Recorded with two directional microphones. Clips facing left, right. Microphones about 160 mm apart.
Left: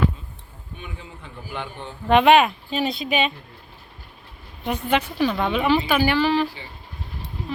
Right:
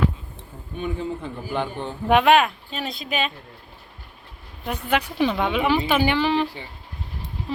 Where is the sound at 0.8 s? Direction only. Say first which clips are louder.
Right 13 dB; 35° right (ahead or behind).